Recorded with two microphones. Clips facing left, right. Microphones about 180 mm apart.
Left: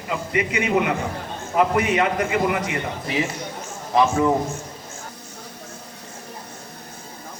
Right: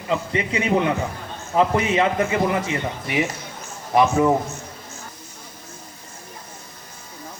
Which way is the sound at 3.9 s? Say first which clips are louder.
Right 1 dB; 20° right (ahead or behind).